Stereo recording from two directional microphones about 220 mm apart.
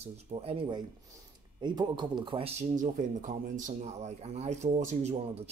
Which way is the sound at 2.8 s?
35° right (ahead or behind).